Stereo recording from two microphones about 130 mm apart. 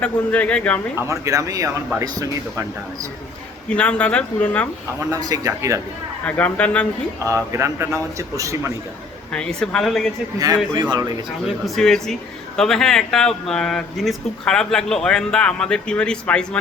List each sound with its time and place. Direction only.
0.0 s speech: 10° left (ahead or behind)
1.0 s a man's voice: 25° right (ahead or behind)
3.7 s speech: 10° left (ahead or behind)
5.1 s a man's voice: 30° right (ahead or behind)
6.2 s speech: 10° left (ahead or behind)
7.3 s a man's voice: 20° right (ahead or behind)
9.3 s speech: 5° left (ahead or behind)
10.3 s a man's voice: 25° right (ahead or behind)
11.4 s speech: centre (ahead or behind)